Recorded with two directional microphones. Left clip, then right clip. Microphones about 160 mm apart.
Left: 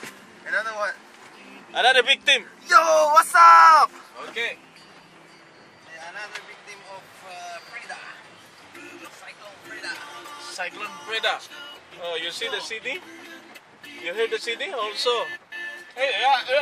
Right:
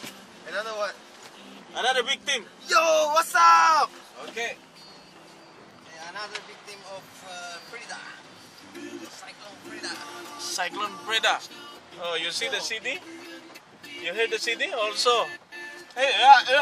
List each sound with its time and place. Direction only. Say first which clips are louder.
0.5 s speech: left 4 dB; 5° left (ahead or behind)
1.7 s a man's voice: left 7 dB; 55° left (ahead or behind)
2.6 s speech: left 3 dB; 10° left (ahead or behind)
10.4 s speech: right 3 dB; 20° right (ahead or behind); by 12.9 s centre (ahead or behind)
14.0 s speech: left 1 dB; centre (ahead or behind)
16.0 s speech: right 5 dB; 25° right (ahead or behind)